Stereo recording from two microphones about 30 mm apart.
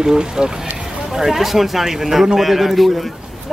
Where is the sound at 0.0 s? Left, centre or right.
Right.